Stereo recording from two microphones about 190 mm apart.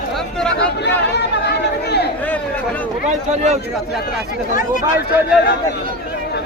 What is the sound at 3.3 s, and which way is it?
Speech, 35° right (ahead or behind).